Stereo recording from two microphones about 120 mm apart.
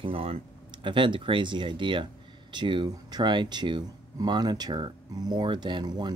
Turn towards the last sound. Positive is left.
turn(degrees=-35)  # may be behind; listen again after turning